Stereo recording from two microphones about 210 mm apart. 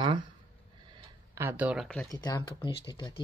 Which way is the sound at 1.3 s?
10° right (ahead or behind).